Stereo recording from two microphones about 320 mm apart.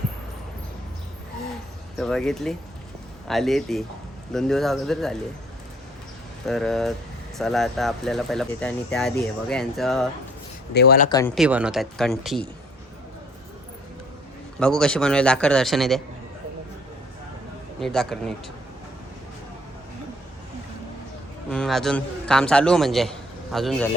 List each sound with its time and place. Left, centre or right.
2.0 s speech: centre
6.4 s speech: centre
10.8 s speech: left
11.3 s speech: centre
14.6 s speech: centre
17.7 s speech: centre
21.5 s a man's voice: centre